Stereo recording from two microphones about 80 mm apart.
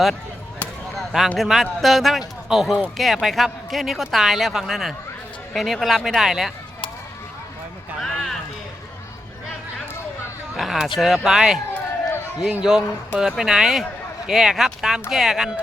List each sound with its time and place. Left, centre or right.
0.9 s a sound: centre
1.4 s speech: centre
8.0 s a sound: centre
10.6 s speech: centre
11.7 s run: left
12.4 s a man's voice: centre